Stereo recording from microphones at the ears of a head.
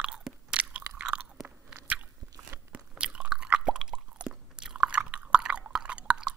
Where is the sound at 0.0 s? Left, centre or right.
Right.